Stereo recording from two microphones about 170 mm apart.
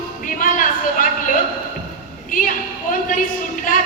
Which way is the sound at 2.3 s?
50° left (ahead or behind).